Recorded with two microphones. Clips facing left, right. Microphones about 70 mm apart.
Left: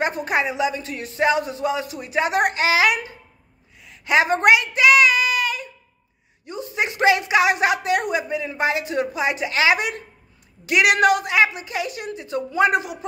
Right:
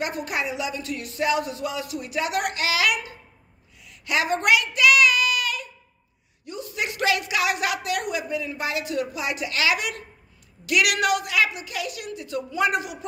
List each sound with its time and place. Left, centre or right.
0.0 s speech: left
3.8 s a sound: left
6.4 s speech: left